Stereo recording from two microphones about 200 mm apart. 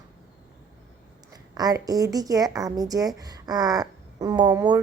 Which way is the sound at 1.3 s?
20° right (ahead or behind).